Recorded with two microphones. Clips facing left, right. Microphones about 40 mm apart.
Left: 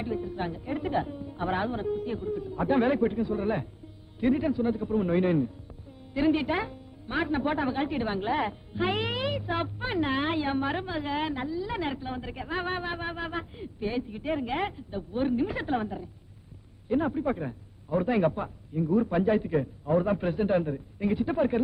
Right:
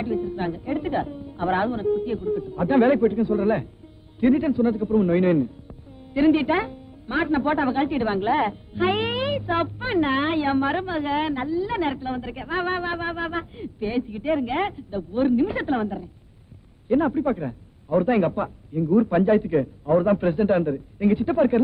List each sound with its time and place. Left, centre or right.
0.0 s a woman's voice: centre